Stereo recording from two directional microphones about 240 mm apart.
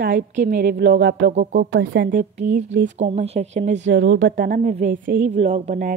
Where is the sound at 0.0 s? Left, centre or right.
Right.